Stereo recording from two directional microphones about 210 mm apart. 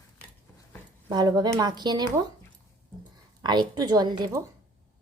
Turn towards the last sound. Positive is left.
turn(degrees=-15)  # may be behind; listen again after turning